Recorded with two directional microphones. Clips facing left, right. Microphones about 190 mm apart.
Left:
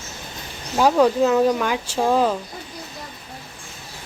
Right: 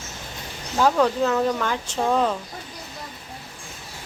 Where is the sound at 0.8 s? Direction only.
10° left (ahead or behind).